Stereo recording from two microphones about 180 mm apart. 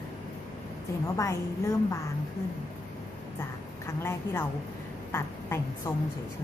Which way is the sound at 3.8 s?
15° left (ahead or behind).